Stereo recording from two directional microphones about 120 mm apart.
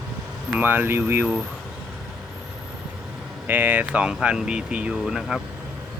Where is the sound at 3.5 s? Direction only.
15° right (ahead or behind).